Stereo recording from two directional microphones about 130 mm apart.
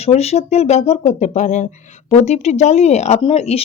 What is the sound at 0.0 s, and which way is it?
Speech, 55° left (ahead or behind).